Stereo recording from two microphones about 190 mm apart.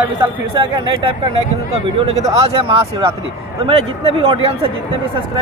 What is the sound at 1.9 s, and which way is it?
A man's voice, 35° right (ahead or behind).